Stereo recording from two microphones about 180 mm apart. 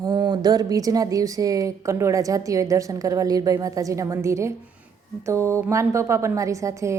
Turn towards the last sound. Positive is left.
turn(degrees=-15)  # may be behind; listen again after turning